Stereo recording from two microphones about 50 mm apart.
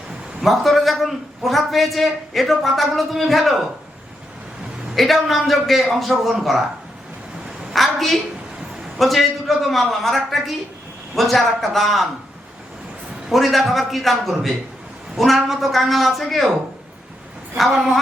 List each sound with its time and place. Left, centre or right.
0.4 s a man's voice: centre
4.9 s a man's voice: centre
7.7 s a woman's voice: centre
13.3 s a man's voice: centre